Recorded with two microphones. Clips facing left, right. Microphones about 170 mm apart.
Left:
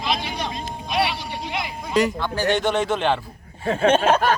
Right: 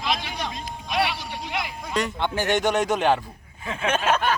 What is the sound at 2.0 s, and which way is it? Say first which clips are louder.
Speech: left 7 dB; centre (ahead or behind).